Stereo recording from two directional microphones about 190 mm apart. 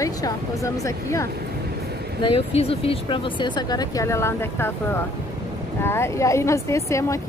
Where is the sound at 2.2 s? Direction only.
30° left (ahead or behind); by 4.7 s 10° left (ahead or behind).